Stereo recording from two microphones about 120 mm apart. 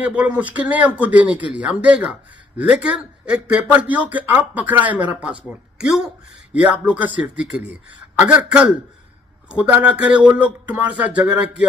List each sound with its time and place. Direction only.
0.0 s a man's voice: 10° right (ahead or behind)